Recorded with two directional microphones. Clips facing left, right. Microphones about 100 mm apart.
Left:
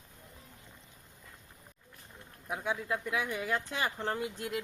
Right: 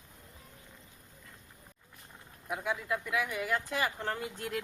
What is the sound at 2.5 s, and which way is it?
Speech, 30° left (ahead or behind).